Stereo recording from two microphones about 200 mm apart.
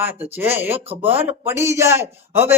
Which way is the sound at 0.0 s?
10° right (ahead or behind).